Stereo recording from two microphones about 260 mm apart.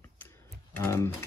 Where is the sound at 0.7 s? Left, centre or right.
Centre.